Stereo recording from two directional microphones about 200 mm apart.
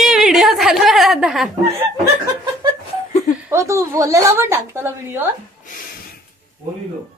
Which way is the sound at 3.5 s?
15° right (ahead or behind).